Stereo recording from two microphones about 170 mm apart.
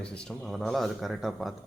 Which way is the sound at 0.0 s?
5° left (ahead or behind).